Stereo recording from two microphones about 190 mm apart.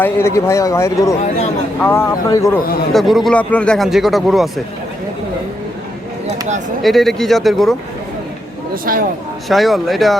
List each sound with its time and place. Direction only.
0.0 s speech: 15° left (ahead or behind)
2.9 s a man's voice: centre (ahead or behind)
6.8 s a man's voice: centre (ahead or behind)
8.7 s speech: 50° right (ahead or behind)
9.5 s a man's voice: centre (ahead or behind)